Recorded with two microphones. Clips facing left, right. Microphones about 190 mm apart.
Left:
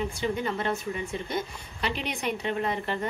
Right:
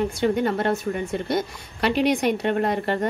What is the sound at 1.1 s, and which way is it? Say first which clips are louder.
A woman's voice: right 7 dB; 75° right (ahead or behind).